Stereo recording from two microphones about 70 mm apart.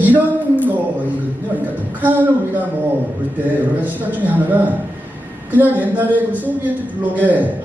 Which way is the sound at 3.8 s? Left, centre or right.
Right.